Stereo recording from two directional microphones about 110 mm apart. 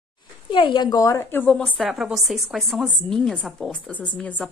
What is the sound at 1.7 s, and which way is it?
A woman's voice, centre (ahead or behind).